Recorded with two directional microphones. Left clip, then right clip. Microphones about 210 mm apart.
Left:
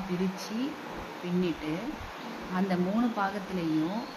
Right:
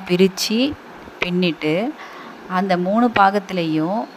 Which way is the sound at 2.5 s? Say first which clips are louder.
Right 13 dB; 40° right (ahead or behind).